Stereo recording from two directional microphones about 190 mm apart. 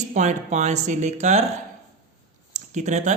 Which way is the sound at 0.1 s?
40° right (ahead or behind).